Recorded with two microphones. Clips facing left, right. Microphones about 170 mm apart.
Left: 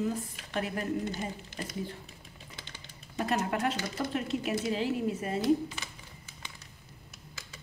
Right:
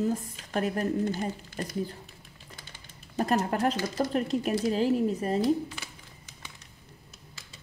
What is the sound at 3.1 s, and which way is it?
A woman's voice, 35° right (ahead or behind).